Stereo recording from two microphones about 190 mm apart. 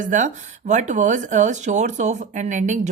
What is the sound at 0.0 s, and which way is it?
Speech, 40° right (ahead or behind).